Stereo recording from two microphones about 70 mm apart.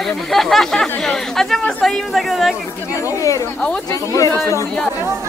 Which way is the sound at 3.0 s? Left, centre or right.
Left.